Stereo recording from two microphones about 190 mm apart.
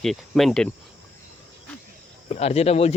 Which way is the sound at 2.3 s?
35° left (ahead or behind).